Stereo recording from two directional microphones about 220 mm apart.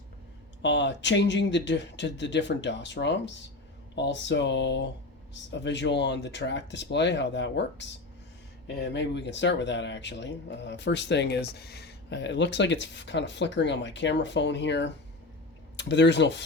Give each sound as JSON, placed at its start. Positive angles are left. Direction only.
{"t": 0.6, "sound": "speech", "side_deg": 55}